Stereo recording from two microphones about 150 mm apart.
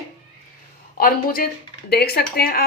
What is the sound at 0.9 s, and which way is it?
Speech, 80° left.